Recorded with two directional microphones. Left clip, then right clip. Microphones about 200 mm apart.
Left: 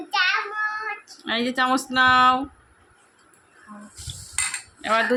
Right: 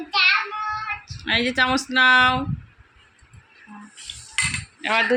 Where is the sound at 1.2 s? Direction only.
10° left (ahead or behind).